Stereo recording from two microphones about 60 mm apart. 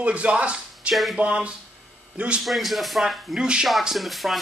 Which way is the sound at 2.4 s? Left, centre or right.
Centre.